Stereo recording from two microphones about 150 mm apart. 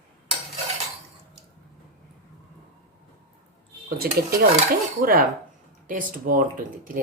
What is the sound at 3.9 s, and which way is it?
Dishes, 80° right.